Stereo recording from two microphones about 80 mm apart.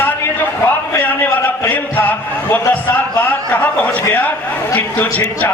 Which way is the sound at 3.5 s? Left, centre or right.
Centre.